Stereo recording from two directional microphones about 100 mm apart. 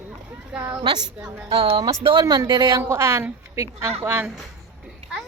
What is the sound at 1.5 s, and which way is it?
Speech, 65° right (ahead or behind).